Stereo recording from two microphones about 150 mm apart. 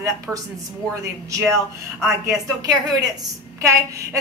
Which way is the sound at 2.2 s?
25° right (ahead or behind).